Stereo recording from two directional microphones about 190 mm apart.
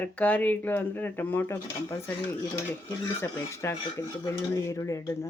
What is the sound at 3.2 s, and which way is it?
Speech, 15° left (ahead or behind).